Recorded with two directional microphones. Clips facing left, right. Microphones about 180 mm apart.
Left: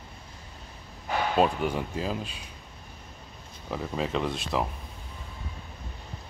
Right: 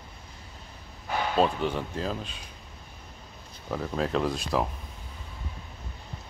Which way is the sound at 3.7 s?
Centre (ahead or behind).